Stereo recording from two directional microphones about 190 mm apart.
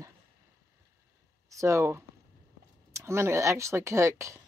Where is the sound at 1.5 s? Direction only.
15° right (ahead or behind).